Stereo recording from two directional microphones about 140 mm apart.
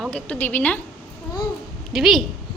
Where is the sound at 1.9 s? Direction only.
Centre (ahead or behind).